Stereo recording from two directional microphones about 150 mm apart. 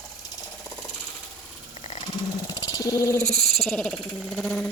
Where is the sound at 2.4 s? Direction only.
25° left (ahead or behind).